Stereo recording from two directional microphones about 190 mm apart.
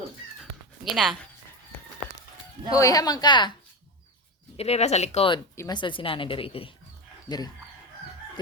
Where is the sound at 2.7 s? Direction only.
20° left (ahead or behind).